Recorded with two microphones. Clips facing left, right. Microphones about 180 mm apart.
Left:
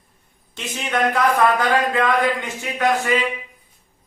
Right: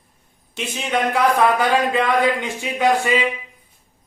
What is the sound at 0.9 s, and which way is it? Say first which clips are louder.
Speech: even; 10° right (ahead or behind).